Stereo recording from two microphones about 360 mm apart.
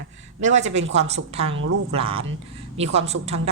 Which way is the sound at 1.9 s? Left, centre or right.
Centre.